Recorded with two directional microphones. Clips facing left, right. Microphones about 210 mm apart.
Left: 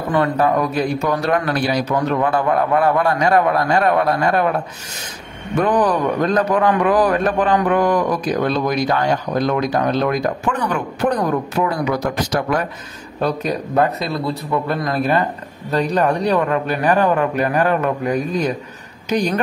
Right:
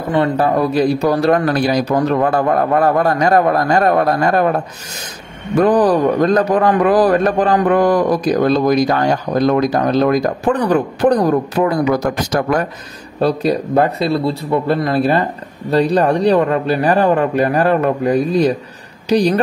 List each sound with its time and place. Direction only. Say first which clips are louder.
0.1 s a man's voice: right 2 dB; 30° right (ahead or behind)
5.6 s a man's voice: right 5 dB; 35° right (ahead or behind)
13.2 s a man's voice: right 5 dB; 35° right (ahead or behind)